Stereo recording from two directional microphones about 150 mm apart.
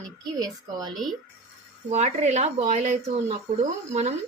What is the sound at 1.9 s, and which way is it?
A woman's voice, 50° right (ahead or behind).